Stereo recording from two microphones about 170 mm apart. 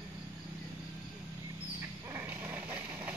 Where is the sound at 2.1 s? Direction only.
15° right (ahead or behind).